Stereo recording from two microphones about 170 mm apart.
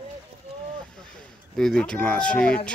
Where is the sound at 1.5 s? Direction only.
5° left (ahead or behind).